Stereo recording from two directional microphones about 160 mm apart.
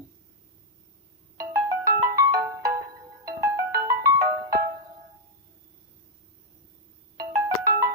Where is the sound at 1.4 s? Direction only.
20° right (ahead or behind).